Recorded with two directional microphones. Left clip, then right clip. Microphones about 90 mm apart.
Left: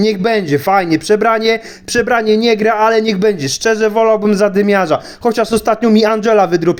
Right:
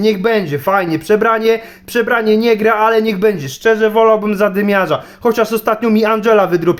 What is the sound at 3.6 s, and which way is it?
Speech, 60° left (ahead or behind).